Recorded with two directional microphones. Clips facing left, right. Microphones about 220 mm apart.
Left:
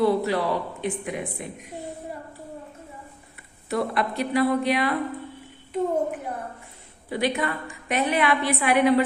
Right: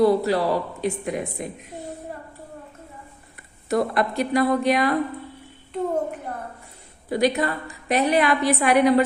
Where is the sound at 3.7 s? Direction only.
45° right (ahead or behind).